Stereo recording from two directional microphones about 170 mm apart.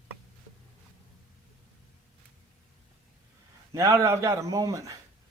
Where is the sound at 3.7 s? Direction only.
15° right (ahead or behind).